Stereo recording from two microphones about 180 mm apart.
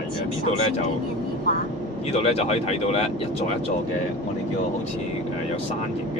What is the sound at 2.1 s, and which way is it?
Speech, 35° left (ahead or behind).